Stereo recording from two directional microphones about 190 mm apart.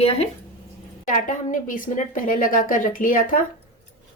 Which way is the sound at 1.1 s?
45° left (ahead or behind).